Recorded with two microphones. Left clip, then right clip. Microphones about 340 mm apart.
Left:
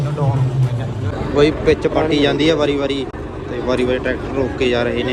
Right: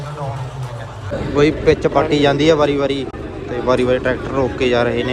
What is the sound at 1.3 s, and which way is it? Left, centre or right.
A man's voice, centre.